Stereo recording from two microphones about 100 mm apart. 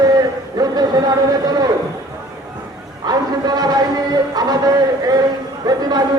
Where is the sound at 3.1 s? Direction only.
45° right (ahead or behind).